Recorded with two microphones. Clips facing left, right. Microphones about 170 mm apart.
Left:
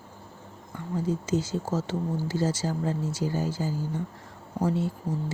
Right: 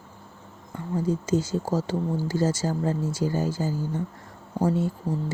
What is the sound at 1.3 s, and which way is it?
Speech, 40° right (ahead or behind).